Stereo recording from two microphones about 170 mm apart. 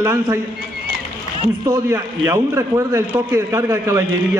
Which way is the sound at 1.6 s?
20° right (ahead or behind).